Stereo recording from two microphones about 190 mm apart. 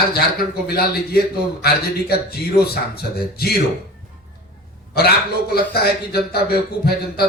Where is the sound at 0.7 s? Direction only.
55° left (ahead or behind).